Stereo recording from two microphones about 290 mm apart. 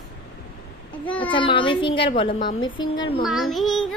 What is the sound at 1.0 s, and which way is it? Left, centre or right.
Child singing, centre.